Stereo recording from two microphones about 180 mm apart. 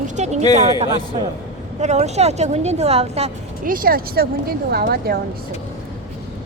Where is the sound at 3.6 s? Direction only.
50° right (ahead or behind).